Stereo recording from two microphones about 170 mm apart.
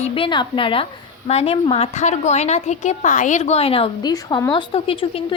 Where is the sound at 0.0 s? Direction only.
30° left (ahead or behind).